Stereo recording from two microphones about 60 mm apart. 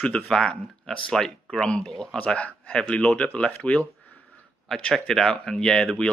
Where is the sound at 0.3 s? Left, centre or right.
Centre.